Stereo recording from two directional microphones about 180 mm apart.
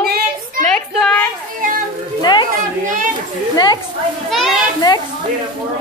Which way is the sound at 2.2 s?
25° left (ahead or behind).